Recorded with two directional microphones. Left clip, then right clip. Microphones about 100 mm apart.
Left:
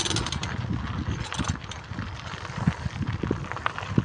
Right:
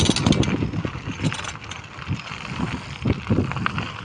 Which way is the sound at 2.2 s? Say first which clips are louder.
Right 2 dB; 30° right (ahead or behind).